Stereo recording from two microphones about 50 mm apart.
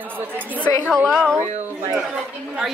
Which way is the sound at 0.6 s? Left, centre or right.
Centre.